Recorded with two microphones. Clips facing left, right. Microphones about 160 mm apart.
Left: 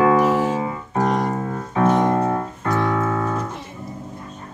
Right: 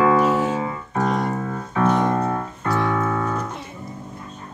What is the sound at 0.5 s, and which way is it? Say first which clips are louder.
Keyboard: left 2 dB; 30° left (ahead or behind).